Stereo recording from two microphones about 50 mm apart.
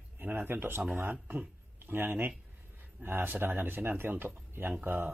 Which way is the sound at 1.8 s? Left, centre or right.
Right.